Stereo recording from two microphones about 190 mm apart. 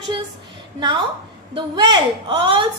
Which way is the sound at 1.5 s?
25° right (ahead or behind).